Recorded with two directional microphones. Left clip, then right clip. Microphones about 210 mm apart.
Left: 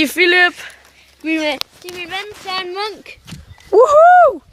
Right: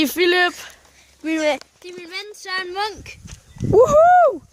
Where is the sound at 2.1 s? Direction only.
40° right (ahead or behind).